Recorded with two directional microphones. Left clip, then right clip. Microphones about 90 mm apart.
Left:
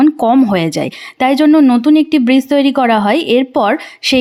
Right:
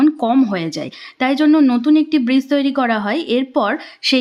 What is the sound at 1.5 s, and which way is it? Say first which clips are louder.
Speech: left 3 dB; 40° left (ahead or behind).